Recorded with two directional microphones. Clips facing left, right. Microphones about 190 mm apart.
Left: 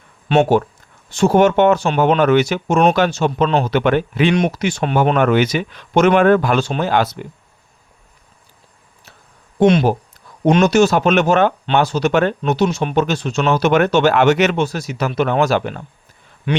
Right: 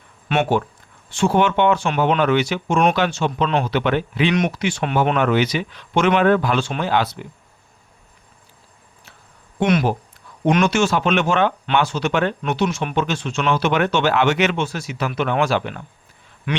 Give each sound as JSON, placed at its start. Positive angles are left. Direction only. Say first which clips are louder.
{"t": 0.3, "sound": "speech", "louder": "left 6 dB", "side_deg": 30}
{"t": 1.1, "sound": "speech", "louder": "left 5 dB", "side_deg": 40}
{"t": 4.4, "sound": "speech", "louder": "left 3 dB", "side_deg": 35}
{"t": 9.6, "sound": "speech", "louder": "left 6 dB", "side_deg": 30}
{"t": 10.5, "sound": "speech", "louder": "left 5 dB", "side_deg": 40}
{"t": 16.5, "sound": "speech", "louder": "left 5 dB", "side_deg": 30}